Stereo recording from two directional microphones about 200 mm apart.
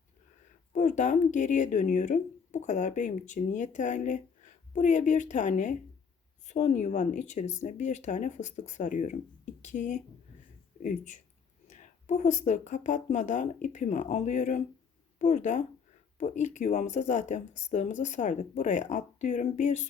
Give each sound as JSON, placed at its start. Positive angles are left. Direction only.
{"t": 0.7, "sound": "speech", "side_deg": 40}